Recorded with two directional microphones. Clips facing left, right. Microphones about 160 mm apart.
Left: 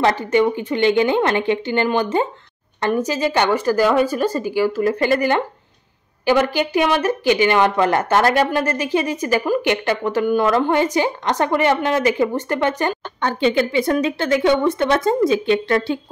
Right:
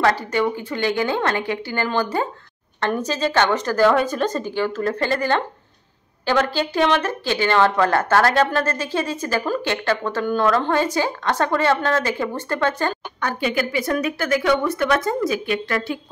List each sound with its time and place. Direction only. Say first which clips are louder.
0.0 s speech: left 3 dB; 20° left (ahead or behind)